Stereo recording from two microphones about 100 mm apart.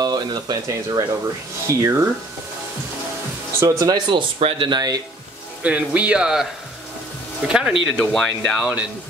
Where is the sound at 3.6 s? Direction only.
35° right (ahead or behind).